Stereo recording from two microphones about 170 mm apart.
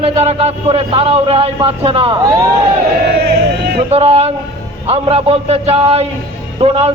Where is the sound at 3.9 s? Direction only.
35° right (ahead or behind).